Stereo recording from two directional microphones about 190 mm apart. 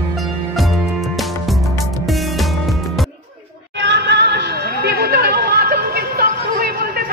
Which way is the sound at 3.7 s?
65° right (ahead or behind).